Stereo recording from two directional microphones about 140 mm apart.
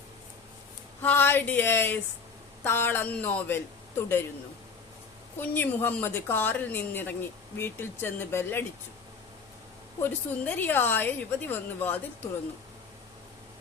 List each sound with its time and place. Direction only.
1.0 s a woman's voice: 15° left (ahead or behind)
5.4 s a woman's voice: 15° left (ahead or behind)
10.0 s a woman's voice: 15° left (ahead or behind)